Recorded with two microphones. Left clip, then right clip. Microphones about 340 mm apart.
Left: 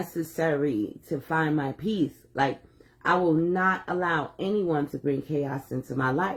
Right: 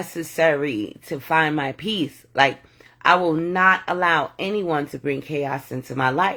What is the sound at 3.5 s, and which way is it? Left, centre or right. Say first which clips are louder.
Speech: right 8 dB; centre.